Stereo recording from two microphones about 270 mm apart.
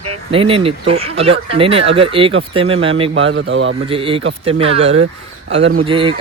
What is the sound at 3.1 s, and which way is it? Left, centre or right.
Speech, right.